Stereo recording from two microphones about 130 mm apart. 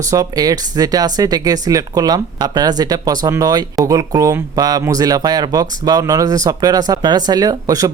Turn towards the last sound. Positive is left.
turn(degrees=-25)  # may be behind; listen again after turning